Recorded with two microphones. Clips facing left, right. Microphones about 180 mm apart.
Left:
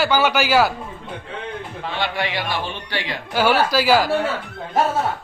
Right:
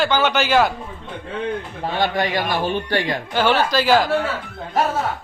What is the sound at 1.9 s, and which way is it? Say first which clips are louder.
A man's voice: right 4 dB; 45° right (ahead or behind).